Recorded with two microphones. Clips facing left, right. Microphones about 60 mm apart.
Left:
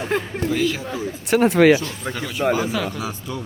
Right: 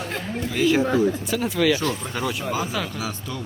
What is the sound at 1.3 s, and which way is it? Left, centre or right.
Speech, left.